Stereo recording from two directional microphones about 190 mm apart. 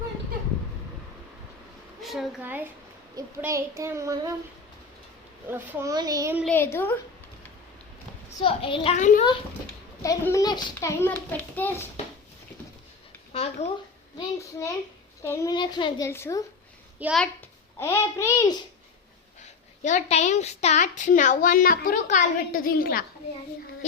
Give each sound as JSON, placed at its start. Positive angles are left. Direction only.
{"t": 2.0, "sound": "a woman's voice", "side_deg": 0}
{"t": 5.5, "sound": "a child's voice", "side_deg": -15}
{"t": 6.4, "sound": "a child's voice", "side_deg": 10}
{"t": 8.4, "sound": "a child's voice", "side_deg": 30}
{"t": 10.0, "sound": "a child's voice", "side_deg": 15}
{"t": 13.3, "sound": "a woman's voice", "side_deg": 30}
{"t": 15.2, "sound": "a child's voice", "side_deg": 15}
{"t": 17.0, "sound": "a child's voice", "side_deg": -10}
{"t": 17.7, "sound": "a child's voice", "side_deg": 15}
{"t": 19.8, "sound": "a woman's voice", "side_deg": 35}